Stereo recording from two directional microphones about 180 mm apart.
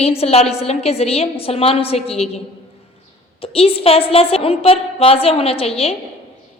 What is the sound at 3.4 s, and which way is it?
A woman's voice, 30° left (ahead or behind).